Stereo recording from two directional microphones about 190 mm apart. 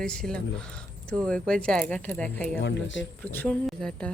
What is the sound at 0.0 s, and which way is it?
Speech, 5° left (ahead or behind).